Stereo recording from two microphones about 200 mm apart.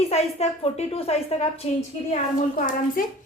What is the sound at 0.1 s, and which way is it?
A woman's voice, 30° left (ahead or behind).